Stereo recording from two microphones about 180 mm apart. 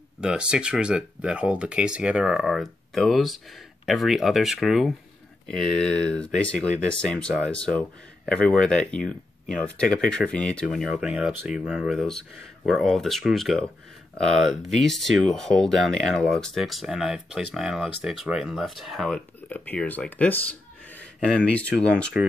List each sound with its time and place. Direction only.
0.2 s speech: 5° right (ahead or behind)
21.5 s speech: 5° left (ahead or behind)